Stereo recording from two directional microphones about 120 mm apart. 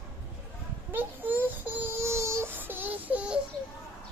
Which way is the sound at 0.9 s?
15° right (ahead or behind).